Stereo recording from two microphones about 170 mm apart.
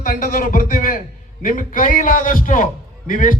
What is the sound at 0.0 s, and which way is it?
A man's voice, 55° left (ahead or behind).